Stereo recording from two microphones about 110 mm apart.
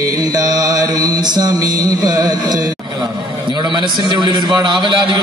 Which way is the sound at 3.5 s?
45° right (ahead or behind).